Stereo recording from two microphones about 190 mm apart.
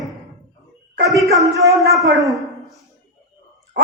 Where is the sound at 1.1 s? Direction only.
Centre (ahead or behind).